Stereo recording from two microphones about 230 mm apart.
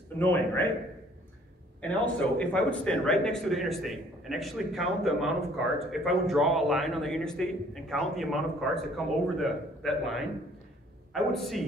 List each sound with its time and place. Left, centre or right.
0.2 s a man's voice: centre
1.8 s a man's voice: centre